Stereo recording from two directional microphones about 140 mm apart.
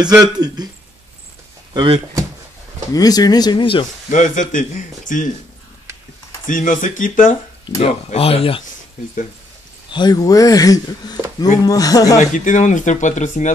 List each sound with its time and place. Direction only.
0.0 s a man's voice: 30° right (ahead or behind)
1.7 s speech: 35° right (ahead or behind)
2.9 s speech: 25° left (ahead or behind)
4.1 s a man's voice: 65° left (ahead or behind)
6.4 s a man's voice: 70° left (ahead or behind)
7.6 s speech: 45° left (ahead or behind)
9.8 s speech: 30° left (ahead or behind)
12.2 s speech: 65° left (ahead or behind)